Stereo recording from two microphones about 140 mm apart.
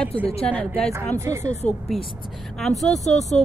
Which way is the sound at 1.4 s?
55° left (ahead or behind).